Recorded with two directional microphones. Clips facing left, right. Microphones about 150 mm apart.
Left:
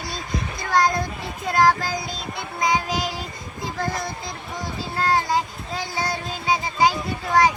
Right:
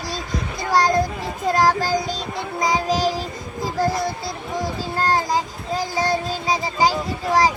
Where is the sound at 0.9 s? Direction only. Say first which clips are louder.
Right 6 dB; 40° right (ahead or behind).